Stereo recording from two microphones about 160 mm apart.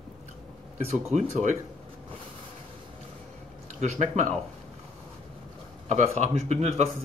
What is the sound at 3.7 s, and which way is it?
Speech, 45° right (ahead or behind).